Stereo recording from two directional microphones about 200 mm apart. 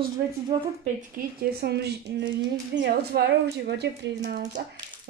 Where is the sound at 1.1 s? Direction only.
50° right (ahead or behind).